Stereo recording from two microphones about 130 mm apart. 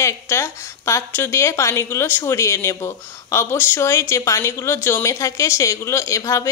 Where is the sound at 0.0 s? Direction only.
20° left (ahead or behind).